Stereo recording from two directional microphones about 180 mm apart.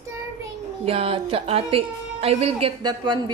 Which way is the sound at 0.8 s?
30° right (ahead or behind).